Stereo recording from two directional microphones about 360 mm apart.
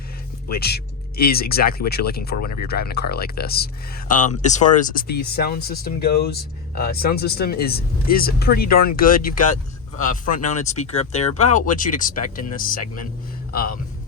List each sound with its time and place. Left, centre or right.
0.4 s speech: left